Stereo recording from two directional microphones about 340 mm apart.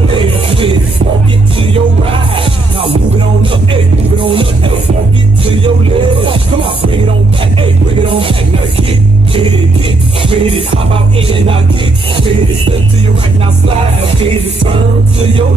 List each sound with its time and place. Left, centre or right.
0.1 s music: centre
10.2 s music: centre
14.2 s music: centre